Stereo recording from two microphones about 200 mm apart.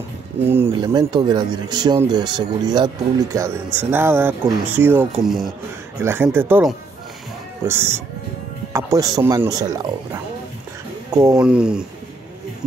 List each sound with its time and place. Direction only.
0.5 s speech: 10° right (ahead or behind)